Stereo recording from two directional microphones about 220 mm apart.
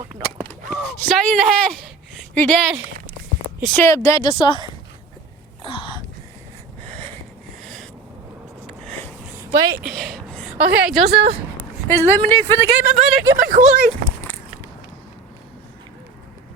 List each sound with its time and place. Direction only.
0.7 s speech: 5° left (ahead or behind)
3.8 s speech: 15° left (ahead or behind)
5.6 s a sound: 25° left (ahead or behind)
6.8 s a sound: 5° left (ahead or behind)
9.6 s speech: 15° right (ahead or behind)
9.8 s speech: centre (ahead or behind)
11.9 s speech: 10° left (ahead or behind)
13.5 s speech: 35° right (ahead or behind)